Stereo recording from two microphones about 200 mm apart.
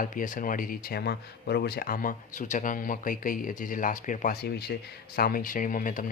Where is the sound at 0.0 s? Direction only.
40° left (ahead or behind).